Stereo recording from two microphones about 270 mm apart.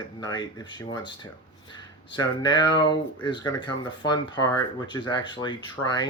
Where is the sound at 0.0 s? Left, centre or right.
Centre.